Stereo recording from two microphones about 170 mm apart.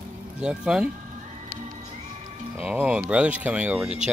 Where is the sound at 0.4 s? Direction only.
5° right (ahead or behind).